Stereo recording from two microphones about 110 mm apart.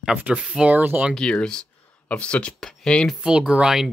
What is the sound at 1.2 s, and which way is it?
Speech, 10° left (ahead or behind).